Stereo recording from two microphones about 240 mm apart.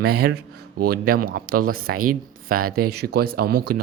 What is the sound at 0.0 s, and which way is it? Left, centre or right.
Speech, right.